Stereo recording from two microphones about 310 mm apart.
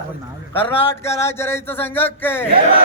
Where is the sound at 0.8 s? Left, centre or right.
Centre.